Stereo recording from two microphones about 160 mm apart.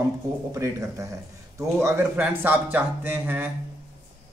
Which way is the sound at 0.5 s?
20° right (ahead or behind).